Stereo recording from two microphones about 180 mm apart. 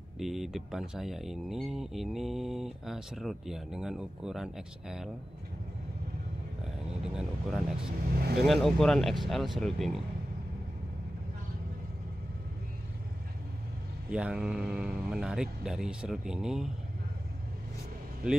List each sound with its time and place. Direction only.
0.2 s speech: centre (ahead or behind)
7.0 s speech: 5° right (ahead or behind)
8.2 s speech: 65° right (ahead or behind)
8.5 s speech: centre (ahead or behind)
14.1 s speech: 5° right (ahead or behind)